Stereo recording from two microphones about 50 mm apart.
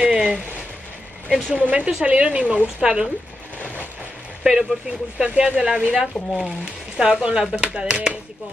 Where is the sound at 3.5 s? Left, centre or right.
Left.